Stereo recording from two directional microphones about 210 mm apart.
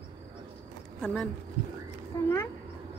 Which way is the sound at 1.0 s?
5° left (ahead or behind).